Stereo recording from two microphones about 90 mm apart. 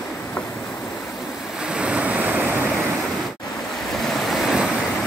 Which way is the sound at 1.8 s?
15° right (ahead or behind).